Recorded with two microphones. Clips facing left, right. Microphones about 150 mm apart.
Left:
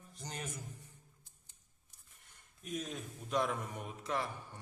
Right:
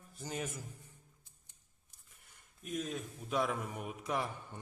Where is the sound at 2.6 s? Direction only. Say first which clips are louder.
Right 2 dB; centre (ahead or behind).